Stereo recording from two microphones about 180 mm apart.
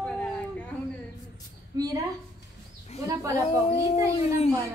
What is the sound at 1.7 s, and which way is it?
Speech, 20° right (ahead or behind).